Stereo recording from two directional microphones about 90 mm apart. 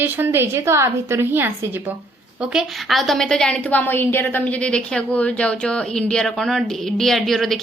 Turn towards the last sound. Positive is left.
turn(degrees=0)  # may be behind; listen again after turning